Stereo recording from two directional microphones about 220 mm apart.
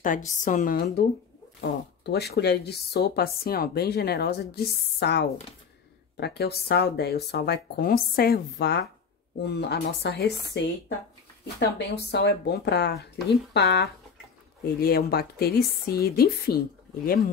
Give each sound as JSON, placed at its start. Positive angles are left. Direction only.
{"t": 0.4, "sound": "a woman's voice", "side_deg": 35}
{"t": 1.6, "sound": "speech", "side_deg": 50}